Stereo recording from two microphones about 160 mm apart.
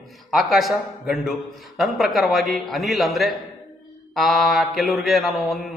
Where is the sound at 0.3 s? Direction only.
Centre (ahead or behind).